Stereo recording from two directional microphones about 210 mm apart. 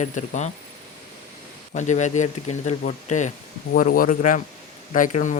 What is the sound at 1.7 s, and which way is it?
A man's voice, 35° left (ahead or behind).